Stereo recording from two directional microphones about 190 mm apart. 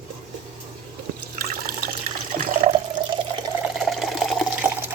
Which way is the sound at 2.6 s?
40° right (ahead or behind).